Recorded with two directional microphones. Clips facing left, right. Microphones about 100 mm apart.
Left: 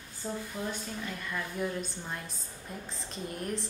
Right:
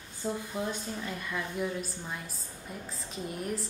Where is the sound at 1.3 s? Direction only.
5° right (ahead or behind).